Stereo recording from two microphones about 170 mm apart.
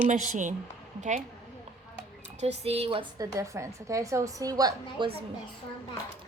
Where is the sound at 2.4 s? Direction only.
40° right (ahead or behind).